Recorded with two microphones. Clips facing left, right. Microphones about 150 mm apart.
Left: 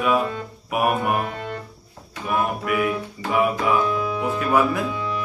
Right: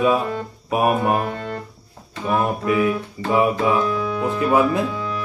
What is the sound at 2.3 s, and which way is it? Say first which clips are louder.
Music: right 3 dB; 30° right (ahead or behind).